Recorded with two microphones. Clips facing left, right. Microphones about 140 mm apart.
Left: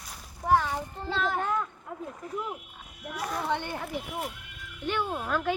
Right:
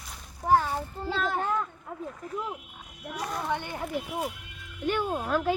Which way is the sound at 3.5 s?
15° right (ahead or behind).